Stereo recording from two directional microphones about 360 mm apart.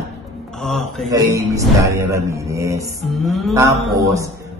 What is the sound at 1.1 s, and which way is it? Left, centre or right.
Speech, centre.